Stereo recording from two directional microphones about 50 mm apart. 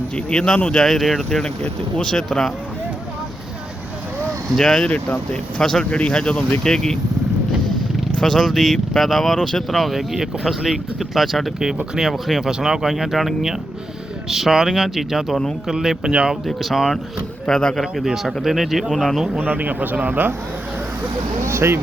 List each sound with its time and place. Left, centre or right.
0.3 s speech: centre
0.9 s speech: centre
4.4 s speech: centre
4.7 s speech: left
8.2 s speech: centre
16.5 s speech: centre
17.5 s speech: centre
18.0 s speech: centre
19.4 s speech: right
21.0 s speech: right